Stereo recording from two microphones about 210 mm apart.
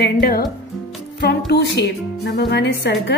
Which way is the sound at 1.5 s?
50° left (ahead or behind).